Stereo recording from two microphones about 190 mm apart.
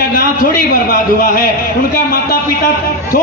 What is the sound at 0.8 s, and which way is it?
Speech, 50° left (ahead or behind).